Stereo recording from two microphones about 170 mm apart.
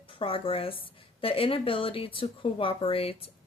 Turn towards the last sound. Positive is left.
turn(degrees=35)  # may be behind; listen again after turning